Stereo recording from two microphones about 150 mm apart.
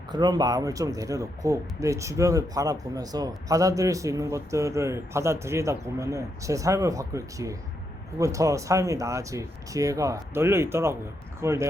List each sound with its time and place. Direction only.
0.1 s speech: 30° right (ahead or behind)